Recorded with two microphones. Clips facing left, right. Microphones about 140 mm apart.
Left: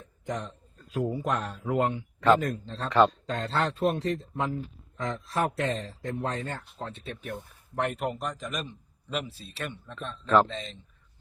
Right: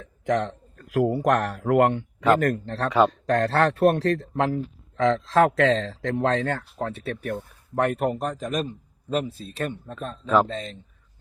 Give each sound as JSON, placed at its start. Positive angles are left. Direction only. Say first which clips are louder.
{"t": 0.0, "sound": "a man's voice", "louder": "right 10 dB", "side_deg": -90}
{"t": 6.7, "sound": "speech", "louder": "right 8 dB", "side_deg": -70}